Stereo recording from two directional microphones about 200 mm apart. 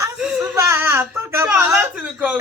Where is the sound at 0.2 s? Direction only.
5° right (ahead or behind).